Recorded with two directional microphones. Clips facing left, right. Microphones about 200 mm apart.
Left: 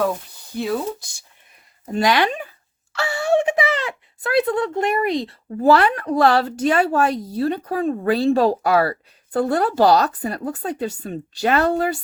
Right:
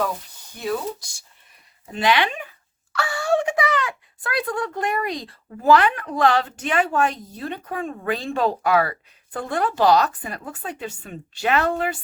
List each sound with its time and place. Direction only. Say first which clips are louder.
1.9 s speech: left 3 dB; 40° left (ahead or behind)
2.9 s speech: left 3 dB; 25° left (ahead or behind)